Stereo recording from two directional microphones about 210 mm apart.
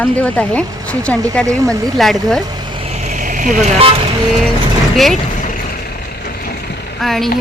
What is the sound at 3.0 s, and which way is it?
Vehicle, 35° right (ahead or behind).